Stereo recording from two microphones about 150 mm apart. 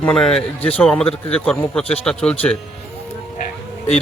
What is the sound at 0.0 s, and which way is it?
Speech, 5° left (ahead or behind).